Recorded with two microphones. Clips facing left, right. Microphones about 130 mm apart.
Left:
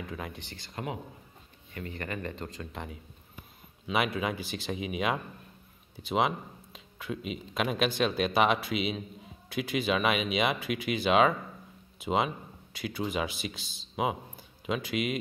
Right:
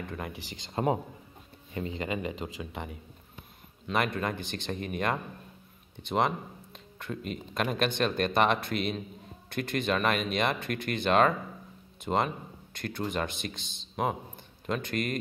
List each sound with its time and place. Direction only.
0.0 s speech: centre (ahead or behind)
0.7 s a man's voice: 30° right (ahead or behind)
1.7 s speech: 20° right (ahead or behind); by 15.1 s 5° left (ahead or behind)